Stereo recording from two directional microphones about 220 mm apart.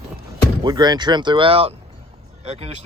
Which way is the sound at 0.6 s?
20° right (ahead or behind).